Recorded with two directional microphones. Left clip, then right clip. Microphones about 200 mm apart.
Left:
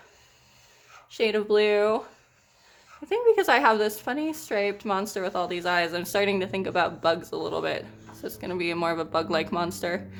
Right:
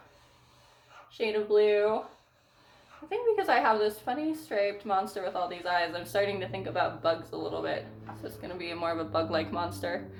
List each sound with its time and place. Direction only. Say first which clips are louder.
1.1 s a woman's voice: left 3 dB; 50° left (ahead or behind)
3.1 s a woman's voice: left 6 dB; 50° left (ahead or behind)